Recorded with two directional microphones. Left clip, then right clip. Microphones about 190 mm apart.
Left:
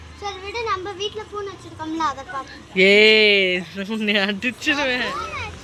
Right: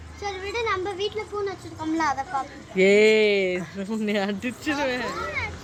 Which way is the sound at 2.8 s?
Centre (ahead or behind).